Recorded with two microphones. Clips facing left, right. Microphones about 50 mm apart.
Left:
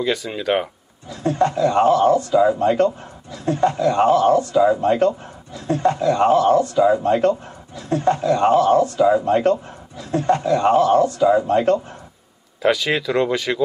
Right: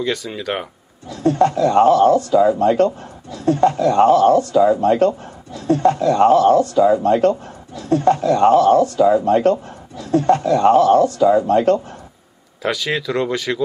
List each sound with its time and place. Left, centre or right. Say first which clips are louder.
0.0 s speech: left 1 dB; centre
1.0 s speech: right 4 dB; left
12.6 s speech: left 2 dB; centre